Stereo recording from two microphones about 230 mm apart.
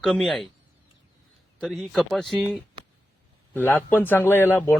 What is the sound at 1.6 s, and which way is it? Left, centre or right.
Speech, centre.